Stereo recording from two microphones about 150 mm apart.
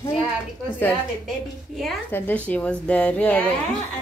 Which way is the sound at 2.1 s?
10° left (ahead or behind).